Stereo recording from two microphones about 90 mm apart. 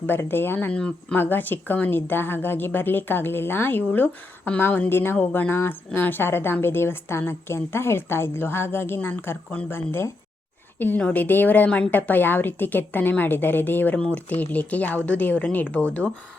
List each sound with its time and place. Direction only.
0.1 s a woman's voice: 25° left (ahead or behind)
0.7 s speech: 10° left (ahead or behind)
1.1 s a woman's voice: 20° left (ahead or behind)